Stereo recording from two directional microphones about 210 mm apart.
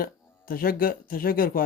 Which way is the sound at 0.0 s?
45° left (ahead or behind).